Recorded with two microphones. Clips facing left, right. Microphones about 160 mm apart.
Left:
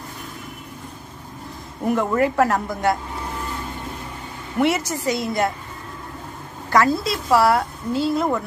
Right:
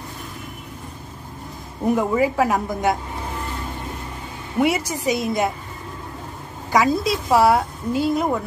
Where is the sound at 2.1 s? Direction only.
5° right (ahead or behind).